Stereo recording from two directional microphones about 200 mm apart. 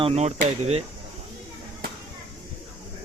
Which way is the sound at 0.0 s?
30° right (ahead or behind).